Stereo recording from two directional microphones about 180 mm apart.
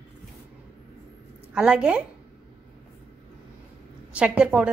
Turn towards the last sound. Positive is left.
turn(degrees=-5)  # may be behind; listen again after turning